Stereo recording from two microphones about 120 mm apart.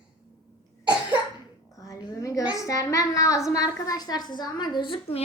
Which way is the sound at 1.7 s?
30° left (ahead or behind).